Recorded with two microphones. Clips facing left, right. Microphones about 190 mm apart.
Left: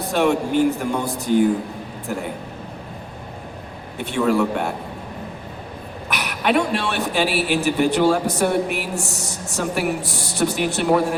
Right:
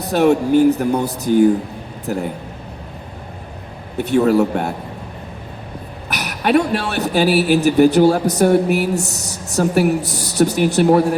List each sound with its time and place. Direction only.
0.1 s a man's voice: 40° right (ahead or behind)
3.9 s a man's voice: 40° right (ahead or behind)
6.1 s a man's voice: 40° right (ahead or behind)